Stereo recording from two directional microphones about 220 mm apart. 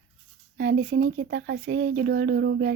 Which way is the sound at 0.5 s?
55° right (ahead or behind).